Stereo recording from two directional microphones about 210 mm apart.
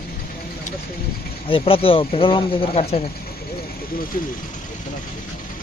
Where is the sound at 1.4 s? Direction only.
25° left (ahead or behind).